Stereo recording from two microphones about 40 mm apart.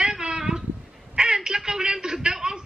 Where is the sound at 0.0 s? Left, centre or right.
Right.